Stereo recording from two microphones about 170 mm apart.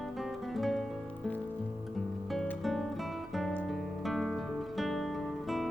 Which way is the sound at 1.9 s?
Centre (ahead or behind).